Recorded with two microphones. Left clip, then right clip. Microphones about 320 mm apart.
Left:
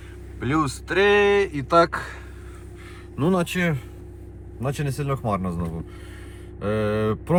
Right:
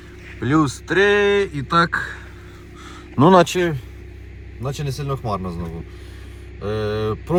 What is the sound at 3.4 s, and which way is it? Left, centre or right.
Speech, right.